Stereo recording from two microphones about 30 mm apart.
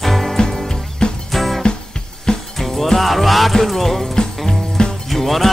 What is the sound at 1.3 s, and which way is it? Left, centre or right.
Music, centre.